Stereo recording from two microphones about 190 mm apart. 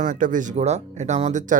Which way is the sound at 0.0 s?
45° right (ahead or behind).